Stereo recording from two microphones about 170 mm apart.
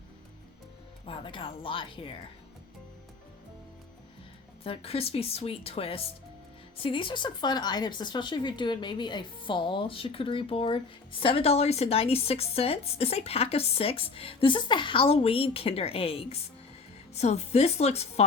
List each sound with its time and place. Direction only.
1.0 s speech: 30° left (ahead or behind)
4.6 s speech: 35° left (ahead or behind)